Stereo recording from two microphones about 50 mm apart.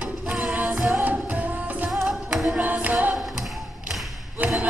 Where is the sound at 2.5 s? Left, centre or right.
Right.